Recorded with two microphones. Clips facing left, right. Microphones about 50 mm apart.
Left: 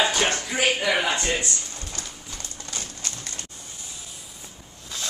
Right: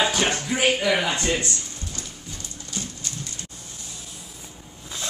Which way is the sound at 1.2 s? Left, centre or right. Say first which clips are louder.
Right 1 dB; centre.